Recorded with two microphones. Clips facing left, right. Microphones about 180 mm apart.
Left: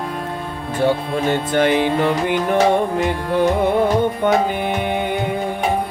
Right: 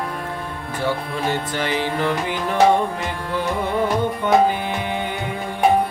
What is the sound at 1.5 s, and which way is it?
Music, 55° left (ahead or behind).